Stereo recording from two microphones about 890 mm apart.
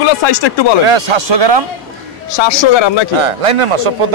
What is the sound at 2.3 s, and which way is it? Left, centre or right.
Speech, left.